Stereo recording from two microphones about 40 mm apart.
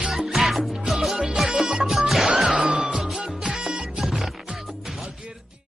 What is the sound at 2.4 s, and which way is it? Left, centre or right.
Music, right.